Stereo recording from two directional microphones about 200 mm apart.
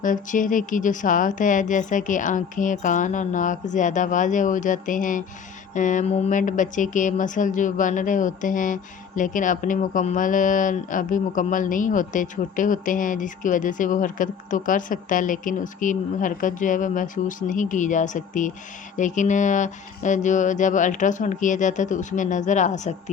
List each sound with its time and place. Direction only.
0.0 s speech: 40° left (ahead or behind)